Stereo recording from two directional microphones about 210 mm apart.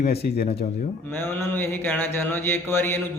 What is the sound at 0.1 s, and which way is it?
Speech, 50° left (ahead or behind).